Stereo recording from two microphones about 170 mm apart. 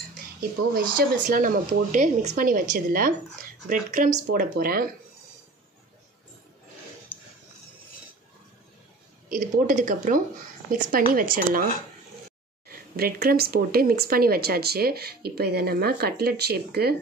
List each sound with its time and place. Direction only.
0.4 s speech: 60° right (ahead or behind)
7.1 s music: 10° left (ahead or behind)
9.3 s speech: 50° right (ahead or behind)
12.6 s speech: 60° right (ahead or behind)